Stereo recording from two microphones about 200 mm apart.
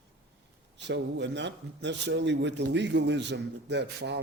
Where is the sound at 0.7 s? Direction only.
60° right (ahead or behind).